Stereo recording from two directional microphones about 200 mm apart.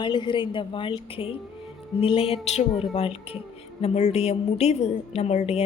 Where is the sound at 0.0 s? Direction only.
25° left (ahead or behind).